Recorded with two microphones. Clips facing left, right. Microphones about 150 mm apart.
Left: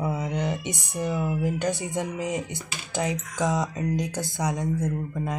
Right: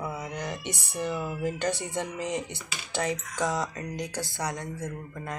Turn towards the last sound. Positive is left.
turn(degrees=15)  # may be behind; listen again after turning